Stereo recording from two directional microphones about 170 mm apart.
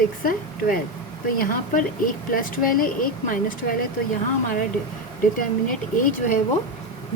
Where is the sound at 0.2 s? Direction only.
55° left (ahead or behind).